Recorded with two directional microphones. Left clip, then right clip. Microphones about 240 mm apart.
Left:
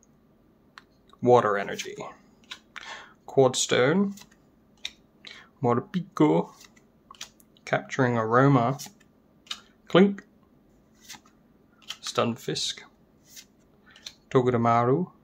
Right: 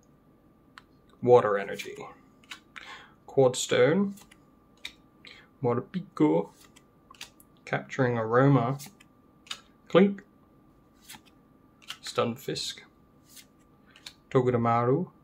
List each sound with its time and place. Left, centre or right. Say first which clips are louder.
0.8 s computer keyboard: left 2 dB; centre
1.2 s speech: left 1 dB; centre
2.7 s a sound: left 4 dB; centre
5.2 s speech: left 3 dB; centre
7.6 s speech: left 3 dB; centre
12.1 s speech: left 2 dB; centre
14.3 s speech: left 3 dB; centre